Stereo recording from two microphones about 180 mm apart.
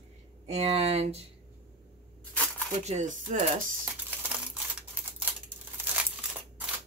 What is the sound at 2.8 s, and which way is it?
Speech, 40° right (ahead or behind).